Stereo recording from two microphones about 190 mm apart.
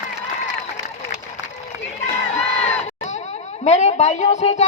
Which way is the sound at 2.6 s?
40° left (ahead or behind).